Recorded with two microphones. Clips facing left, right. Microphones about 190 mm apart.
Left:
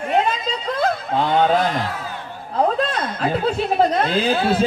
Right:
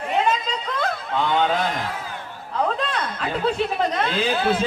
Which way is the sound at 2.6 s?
35° left (ahead or behind).